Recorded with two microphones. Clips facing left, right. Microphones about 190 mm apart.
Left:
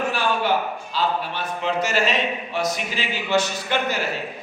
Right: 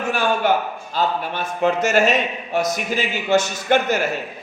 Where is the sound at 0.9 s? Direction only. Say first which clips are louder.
Right 3 dB; 50° right (ahead or behind).